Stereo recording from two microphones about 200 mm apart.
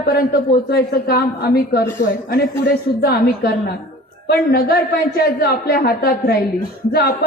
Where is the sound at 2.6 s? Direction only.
50° left (ahead or behind).